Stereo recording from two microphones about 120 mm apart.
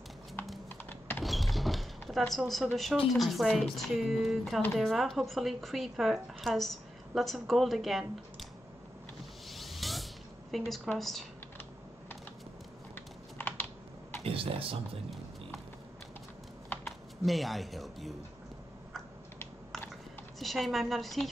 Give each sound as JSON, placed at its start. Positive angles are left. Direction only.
{"t": 0.8, "sound": "a sound", "side_deg": 15}
{"t": 1.2, "sound": "a sound", "side_deg": 0}
{"t": 3.1, "sound": "speech", "side_deg": 0}
{"t": 9.5, "sound": "vehicle", "side_deg": 0}
{"t": 10.5, "sound": "speech", "side_deg": 0}
{"t": 12.9, "sound": "typing", "side_deg": 15}
{"t": 14.2, "sound": "speech", "side_deg": -50}
{"t": 16.6, "sound": "a sound", "side_deg": 15}
{"t": 17.2, "sound": "speech", "side_deg": 0}
{"t": 20.3, "sound": "speech", "side_deg": 0}